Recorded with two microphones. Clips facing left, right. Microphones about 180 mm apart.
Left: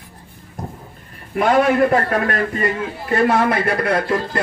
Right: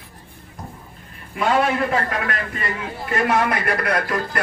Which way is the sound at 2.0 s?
40° left (ahead or behind).